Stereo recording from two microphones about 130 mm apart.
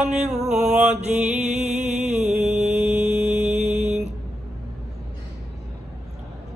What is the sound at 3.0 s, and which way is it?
Mantra, 60° right (ahead or behind).